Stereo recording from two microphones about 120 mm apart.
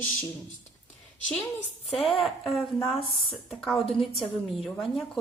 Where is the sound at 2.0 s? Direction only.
Centre (ahead or behind).